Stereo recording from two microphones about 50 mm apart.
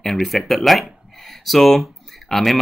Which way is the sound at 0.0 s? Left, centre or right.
Centre.